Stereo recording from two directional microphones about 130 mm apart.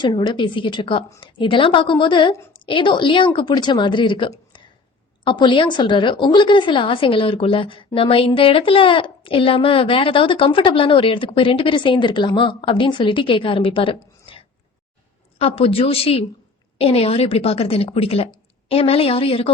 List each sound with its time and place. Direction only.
0.0 s a woman's voice: 35° left (ahead or behind)